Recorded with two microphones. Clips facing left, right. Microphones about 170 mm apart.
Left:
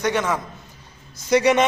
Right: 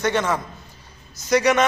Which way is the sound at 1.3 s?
25° left (ahead or behind).